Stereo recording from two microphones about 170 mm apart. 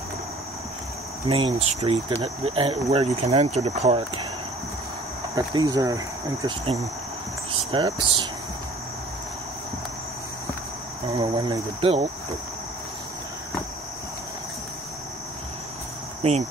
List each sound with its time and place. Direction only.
1.2 s speech: 35° right (ahead or behind)
5.3 s speech: 20° right (ahead or behind)
6.6 s speech: 35° right (ahead or behind)
11.1 s speech: 25° right (ahead or behind)
16.2 s cricket: 40° right (ahead or behind)